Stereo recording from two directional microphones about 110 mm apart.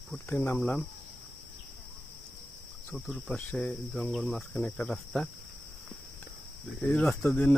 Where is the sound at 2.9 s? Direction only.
5° left (ahead or behind).